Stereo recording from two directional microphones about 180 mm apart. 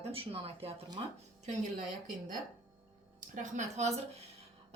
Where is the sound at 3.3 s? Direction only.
40° right (ahead or behind).